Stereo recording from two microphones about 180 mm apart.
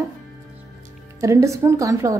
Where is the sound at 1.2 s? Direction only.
15° right (ahead or behind).